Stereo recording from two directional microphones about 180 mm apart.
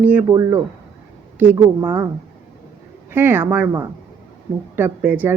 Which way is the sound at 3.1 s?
10° right (ahead or behind).